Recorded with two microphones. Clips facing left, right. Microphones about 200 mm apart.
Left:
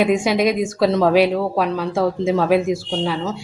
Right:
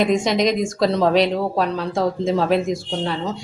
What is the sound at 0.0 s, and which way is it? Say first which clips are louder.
Speech: left 1 dB; 10° left (ahead or behind).